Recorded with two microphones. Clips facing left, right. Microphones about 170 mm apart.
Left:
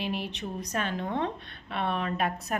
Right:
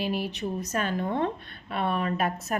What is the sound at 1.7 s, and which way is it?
Speech, 45° right (ahead or behind).